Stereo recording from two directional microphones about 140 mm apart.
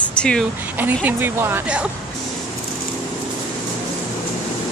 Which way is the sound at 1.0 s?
15° right (ahead or behind).